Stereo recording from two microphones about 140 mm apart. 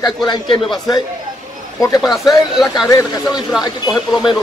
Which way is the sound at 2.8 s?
25° left (ahead or behind).